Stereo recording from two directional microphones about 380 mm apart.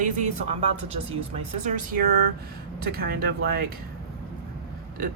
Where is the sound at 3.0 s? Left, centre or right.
Right.